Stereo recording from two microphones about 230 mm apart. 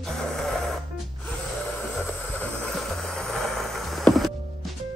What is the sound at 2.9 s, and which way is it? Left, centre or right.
Music, centre.